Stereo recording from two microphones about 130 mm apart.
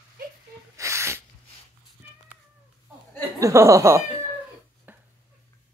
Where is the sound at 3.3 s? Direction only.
25° right (ahead or behind).